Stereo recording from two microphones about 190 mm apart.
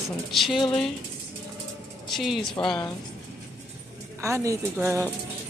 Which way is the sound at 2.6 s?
25° left (ahead or behind).